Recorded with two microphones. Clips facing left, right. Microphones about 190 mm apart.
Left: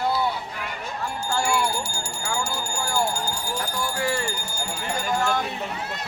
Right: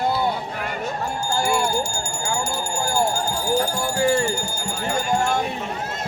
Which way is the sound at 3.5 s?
30° right (ahead or behind).